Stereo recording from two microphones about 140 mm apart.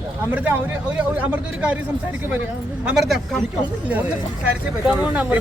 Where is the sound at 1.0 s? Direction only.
10° right (ahead or behind).